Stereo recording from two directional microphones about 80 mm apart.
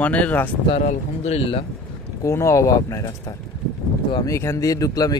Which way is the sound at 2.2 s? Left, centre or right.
Left.